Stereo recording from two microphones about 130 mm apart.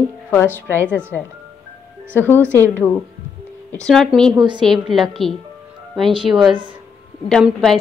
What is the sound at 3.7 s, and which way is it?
Speech, 5° left (ahead or behind).